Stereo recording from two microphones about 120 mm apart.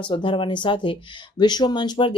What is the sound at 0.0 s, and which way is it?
Speech, 40° left (ahead or behind).